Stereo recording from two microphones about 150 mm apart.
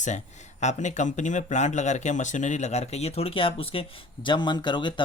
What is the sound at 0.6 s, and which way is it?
Speech, 50° left (ahead or behind).